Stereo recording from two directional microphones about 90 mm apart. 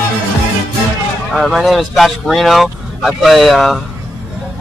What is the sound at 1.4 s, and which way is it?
Speech, centre (ahead or behind).